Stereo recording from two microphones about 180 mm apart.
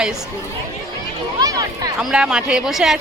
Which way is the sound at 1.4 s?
20° right (ahead or behind).